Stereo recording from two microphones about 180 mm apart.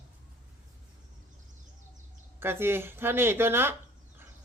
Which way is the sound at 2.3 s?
15° right (ahead or behind).